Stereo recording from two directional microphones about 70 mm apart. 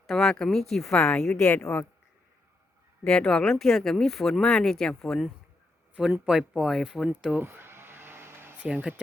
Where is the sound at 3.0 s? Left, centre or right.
Centre.